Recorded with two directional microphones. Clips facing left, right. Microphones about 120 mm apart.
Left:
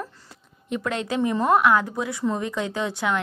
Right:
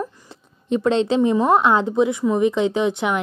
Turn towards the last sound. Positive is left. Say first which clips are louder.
# right 5 dB
turn(degrees=-20)  # may be behind; listen again after turning